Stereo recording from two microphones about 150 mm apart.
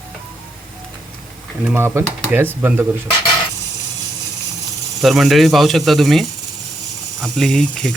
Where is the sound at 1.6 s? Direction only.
15° right (ahead or behind).